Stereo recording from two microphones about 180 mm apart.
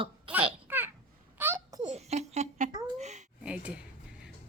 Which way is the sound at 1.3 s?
15° right (ahead or behind).